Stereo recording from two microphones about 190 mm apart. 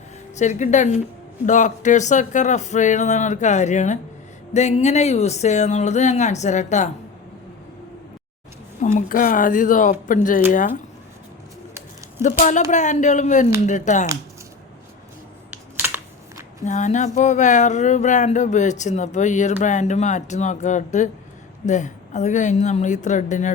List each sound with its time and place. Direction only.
0.3 s speech: 40° left (ahead or behind)
8.8 s speech: 40° left (ahead or behind)
12.2 s speech: 40° left (ahead or behind)
15.4 s computer keyboard: 10° right (ahead or behind)
16.6 s speech: 40° left (ahead or behind)